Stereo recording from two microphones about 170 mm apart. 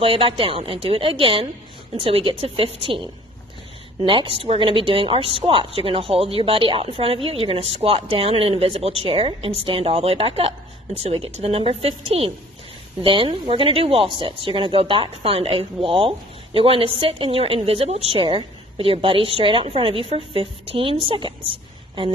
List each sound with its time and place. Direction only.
0.0 s speech: 35° right (ahead or behind)